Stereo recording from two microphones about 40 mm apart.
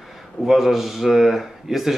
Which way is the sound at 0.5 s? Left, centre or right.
Centre.